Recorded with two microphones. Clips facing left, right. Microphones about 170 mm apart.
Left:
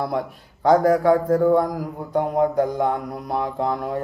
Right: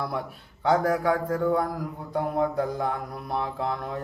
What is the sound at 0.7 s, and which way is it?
Speech, 40° left (ahead or behind).